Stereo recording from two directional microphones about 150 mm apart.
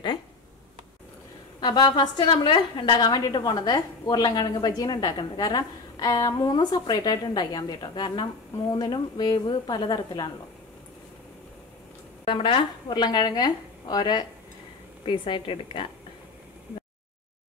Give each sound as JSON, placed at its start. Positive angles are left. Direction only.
{"t": 1.6, "sound": "a woman's voice", "side_deg": 30}
{"t": 12.3, "sound": "a woman's voice", "side_deg": 35}